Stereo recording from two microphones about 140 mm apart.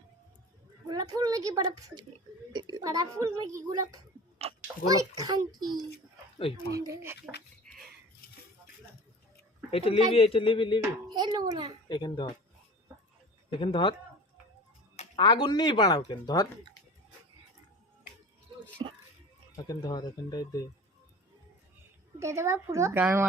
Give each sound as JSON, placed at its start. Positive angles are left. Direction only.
{"t": 0.9, "sound": "speech", "side_deg": -25}
{"t": 4.4, "sound": "a sound", "side_deg": -45}
{"t": 4.9, "sound": "speech", "side_deg": -25}
{"t": 6.7, "sound": "speech", "side_deg": -25}
{"t": 7.7, "sound": "a sound", "side_deg": 5}
{"t": 9.7, "sound": "a man's voice", "side_deg": 40}
{"t": 11.1, "sound": "a child's voice", "side_deg": -30}
{"t": 11.9, "sound": "speech", "side_deg": 30}
{"t": 13.6, "sound": "speech", "side_deg": 35}
{"t": 15.1, "sound": "speech", "side_deg": 35}
{"t": 19.6, "sound": "speech", "side_deg": 30}
{"t": 22.2, "sound": "speech", "side_deg": -20}